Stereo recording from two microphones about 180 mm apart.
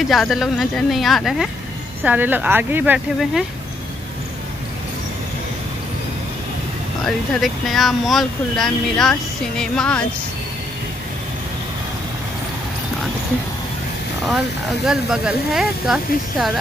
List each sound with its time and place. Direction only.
0.1 s speech: centre (ahead or behind)
7.1 s speech: centre (ahead or behind)
14.9 s speech: 5° right (ahead or behind)